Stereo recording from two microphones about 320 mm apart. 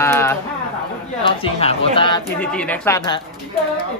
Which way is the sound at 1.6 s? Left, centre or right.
Centre.